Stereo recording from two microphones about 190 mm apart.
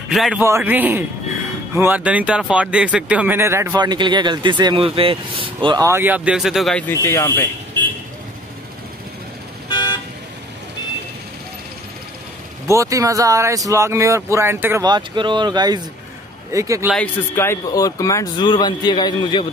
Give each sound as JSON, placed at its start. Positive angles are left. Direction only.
{"t": 0.1, "sound": "a man's voice", "side_deg": 0}
{"t": 0.4, "sound": "speech", "side_deg": -10}
{"t": 6.9, "sound": "speech", "side_deg": 15}
{"t": 12.6, "sound": "speech", "side_deg": -15}
{"t": 16.9, "sound": "a man's voice", "side_deg": 10}